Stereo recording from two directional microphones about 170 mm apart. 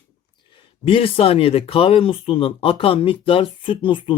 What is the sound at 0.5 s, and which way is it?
Speech, 30° left (ahead or behind).